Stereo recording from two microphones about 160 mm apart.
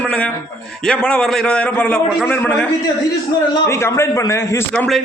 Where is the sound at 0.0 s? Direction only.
5° left (ahead or behind).